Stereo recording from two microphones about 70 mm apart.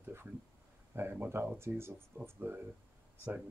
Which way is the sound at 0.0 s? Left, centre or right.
Right.